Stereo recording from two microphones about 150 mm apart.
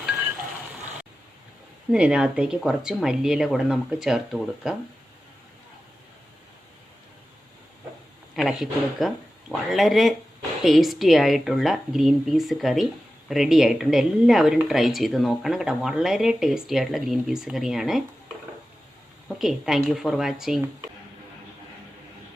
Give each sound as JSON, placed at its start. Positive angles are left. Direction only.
{"t": 1.9, "sound": "a woman's voice", "side_deg": -5}
{"t": 8.4, "sound": "a woman's voice", "side_deg": 0}
{"t": 19.4, "sound": "a woman's voice", "side_deg": 0}